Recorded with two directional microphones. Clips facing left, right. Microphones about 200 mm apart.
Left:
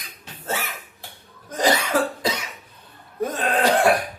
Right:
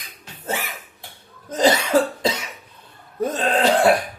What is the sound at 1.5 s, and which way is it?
Cough, 25° right (ahead or behind).